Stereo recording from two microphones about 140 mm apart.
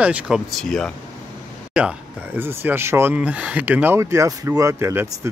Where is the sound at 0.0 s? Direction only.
10° right (ahead or behind).